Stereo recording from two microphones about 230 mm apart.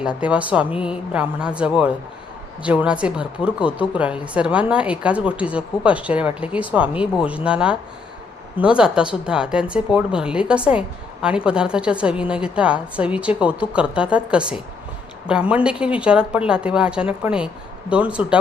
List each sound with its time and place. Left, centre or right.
0.0 s a woman's voice: centre